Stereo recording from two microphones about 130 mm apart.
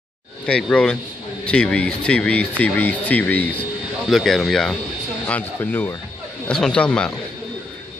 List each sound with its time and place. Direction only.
0.5 s speech: 10° left (ahead or behind)
4.1 s speech: centre (ahead or behind)
5.2 s speech: 15° left (ahead or behind)
6.4 s speech: 5° left (ahead or behind)